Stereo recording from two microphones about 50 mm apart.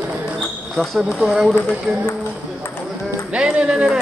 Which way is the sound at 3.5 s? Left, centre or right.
Right.